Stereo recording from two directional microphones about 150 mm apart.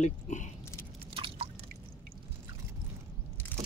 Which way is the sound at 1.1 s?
40° right (ahead or behind).